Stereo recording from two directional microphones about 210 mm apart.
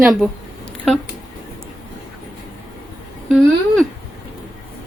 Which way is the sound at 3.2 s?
Centre (ahead or behind).